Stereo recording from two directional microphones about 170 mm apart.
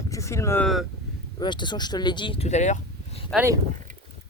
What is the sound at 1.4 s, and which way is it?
Speech, 25° left (ahead or behind).